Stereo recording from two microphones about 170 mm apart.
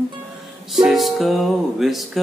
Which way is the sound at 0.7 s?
Centre (ahead or behind).